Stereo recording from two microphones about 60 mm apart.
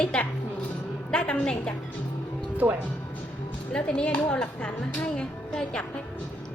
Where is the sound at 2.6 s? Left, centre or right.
Right.